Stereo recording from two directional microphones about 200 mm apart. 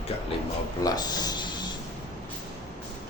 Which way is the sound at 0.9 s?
20° left (ahead or behind).